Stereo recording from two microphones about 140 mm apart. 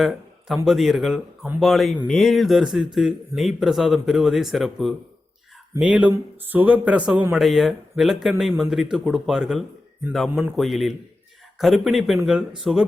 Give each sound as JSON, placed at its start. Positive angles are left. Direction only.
{"t": 0.0, "sound": "speech", "side_deg": 0}